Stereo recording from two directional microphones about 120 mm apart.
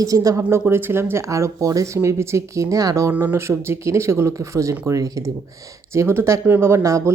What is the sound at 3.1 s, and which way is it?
Speech, 15° right (ahead or behind).